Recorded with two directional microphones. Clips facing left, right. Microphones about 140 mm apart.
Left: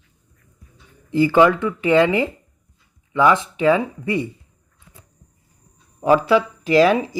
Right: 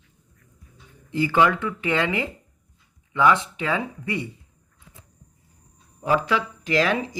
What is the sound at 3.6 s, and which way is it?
Speech, 25° left (ahead or behind).